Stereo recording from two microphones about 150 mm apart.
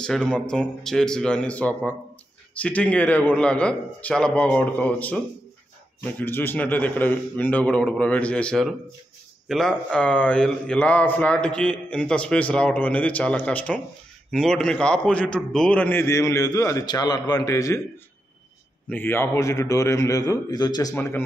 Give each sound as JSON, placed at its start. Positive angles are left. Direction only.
{"t": 0.0, "sound": "a man's voice", "side_deg": 5}
{"t": 18.9, "sound": "a man's voice", "side_deg": 15}
{"t": 20.9, "sound": "speech", "side_deg": 15}